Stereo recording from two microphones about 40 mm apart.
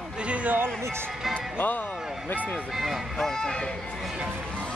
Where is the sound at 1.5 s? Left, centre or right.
Left.